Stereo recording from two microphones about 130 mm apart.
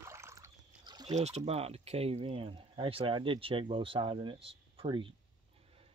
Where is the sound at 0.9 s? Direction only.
35° right (ahead or behind).